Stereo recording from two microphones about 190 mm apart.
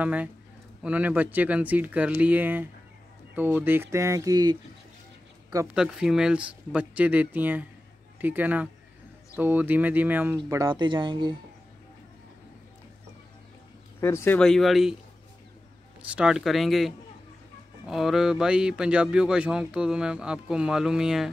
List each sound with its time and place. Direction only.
0.0 s speech: 10° right (ahead or behind)
5.8 s speech: 5° right (ahead or behind)
10.7 s speech: 25° right (ahead or behind)
14.0 s speech: 10° left (ahead or behind)
16.0 s speech: 5° right (ahead or behind)